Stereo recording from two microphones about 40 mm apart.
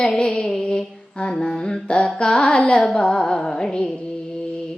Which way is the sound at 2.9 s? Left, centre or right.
Centre.